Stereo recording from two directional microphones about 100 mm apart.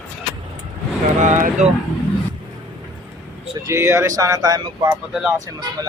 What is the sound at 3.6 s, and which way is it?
Speech, 30° right (ahead or behind).